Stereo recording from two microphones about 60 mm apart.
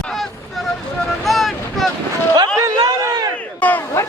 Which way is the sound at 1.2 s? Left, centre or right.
Centre.